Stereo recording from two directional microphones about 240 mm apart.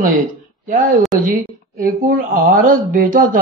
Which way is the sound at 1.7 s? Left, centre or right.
Right.